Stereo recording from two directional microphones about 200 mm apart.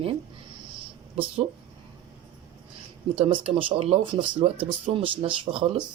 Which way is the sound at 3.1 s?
30° right (ahead or behind).